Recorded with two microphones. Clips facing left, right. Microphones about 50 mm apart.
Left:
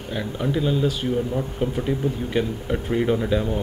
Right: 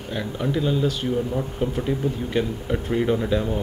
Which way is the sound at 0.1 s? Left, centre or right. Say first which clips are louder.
Even; centre.